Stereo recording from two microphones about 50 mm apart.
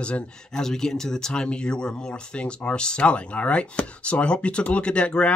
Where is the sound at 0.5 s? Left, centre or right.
Centre.